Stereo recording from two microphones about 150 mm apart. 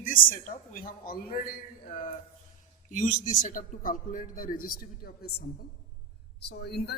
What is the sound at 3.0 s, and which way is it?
A man's voice, 60° left (ahead or behind).